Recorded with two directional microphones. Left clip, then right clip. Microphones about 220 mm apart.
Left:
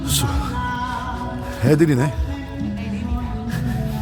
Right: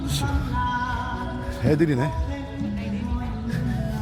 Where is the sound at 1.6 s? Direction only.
15° left (ahead or behind).